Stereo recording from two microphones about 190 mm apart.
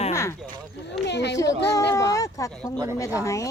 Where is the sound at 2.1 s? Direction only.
15° left (ahead or behind).